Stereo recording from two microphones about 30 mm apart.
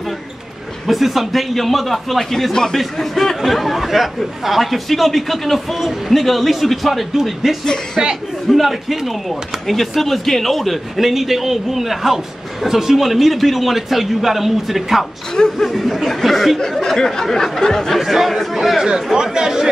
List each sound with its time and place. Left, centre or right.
0.8 s speech: centre
7.6 s speech: centre
8.5 s speech: centre
16.7 s speech: centre
17.9 s speech: centre
18.8 s speech: centre